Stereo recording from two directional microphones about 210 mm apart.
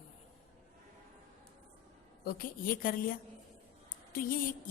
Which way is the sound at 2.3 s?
45° left (ahead or behind).